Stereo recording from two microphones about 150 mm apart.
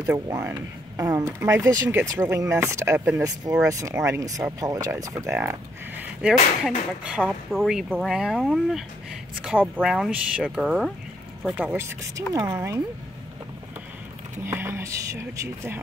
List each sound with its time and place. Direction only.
0.0 s speech: 20° right (ahead or behind)
11.5 s speech: 15° right (ahead or behind)
14.4 s speech: 15° right (ahead or behind)